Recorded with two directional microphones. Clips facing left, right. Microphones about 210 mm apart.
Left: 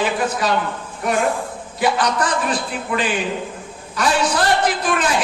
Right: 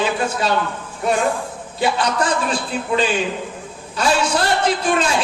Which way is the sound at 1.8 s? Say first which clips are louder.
Even; 25° right (ahead or behind).